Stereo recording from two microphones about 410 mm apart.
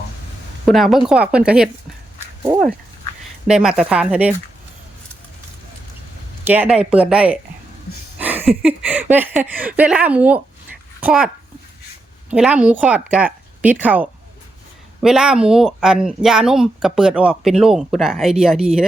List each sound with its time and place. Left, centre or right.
0.6 s speech: centre
6.4 s a child's voice: centre
12.3 s speech: centre